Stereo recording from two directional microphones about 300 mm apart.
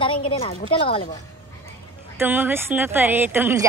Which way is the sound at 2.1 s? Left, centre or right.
Centre.